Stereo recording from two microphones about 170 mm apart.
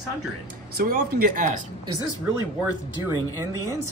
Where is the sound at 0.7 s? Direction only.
55° right (ahead or behind).